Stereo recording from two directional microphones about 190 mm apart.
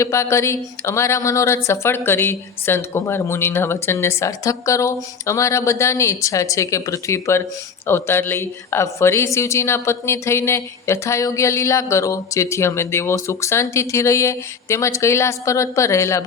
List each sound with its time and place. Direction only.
0.0 s a woman's voice: 15° left (ahead or behind)